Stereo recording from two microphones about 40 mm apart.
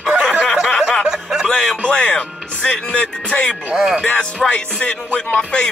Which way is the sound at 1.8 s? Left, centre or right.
Left.